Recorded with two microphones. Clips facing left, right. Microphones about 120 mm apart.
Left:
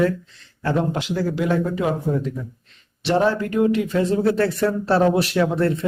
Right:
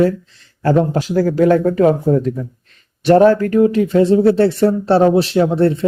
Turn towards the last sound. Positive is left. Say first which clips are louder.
# right 6 dB
turn(degrees=-30)  # may be behind; listen again after turning